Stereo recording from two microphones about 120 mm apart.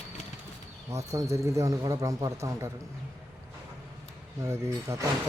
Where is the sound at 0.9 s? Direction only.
25° right (ahead or behind).